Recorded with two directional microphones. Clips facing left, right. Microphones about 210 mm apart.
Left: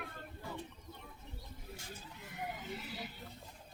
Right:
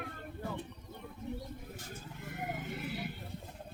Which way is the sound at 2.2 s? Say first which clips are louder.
Right 4 dB; 50° right (ahead or behind).